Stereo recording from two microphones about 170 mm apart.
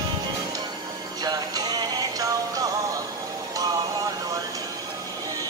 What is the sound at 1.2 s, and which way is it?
Music, 25° right (ahead or behind).